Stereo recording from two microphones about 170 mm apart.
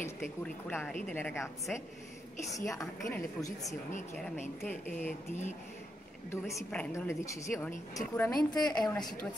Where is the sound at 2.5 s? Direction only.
20° left (ahead or behind).